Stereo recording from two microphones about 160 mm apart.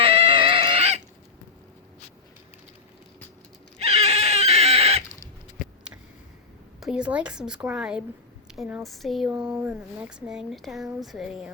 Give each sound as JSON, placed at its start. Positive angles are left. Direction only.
{"t": 0.0, "sound": "dog", "side_deg": -35}
{"t": 3.8, "sound": "a sound", "side_deg": -40}
{"t": 6.7, "sound": "speech", "side_deg": -5}